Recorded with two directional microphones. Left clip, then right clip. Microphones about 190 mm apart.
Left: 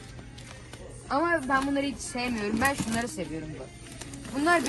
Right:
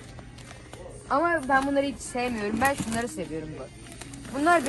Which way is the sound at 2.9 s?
Centre (ahead or behind).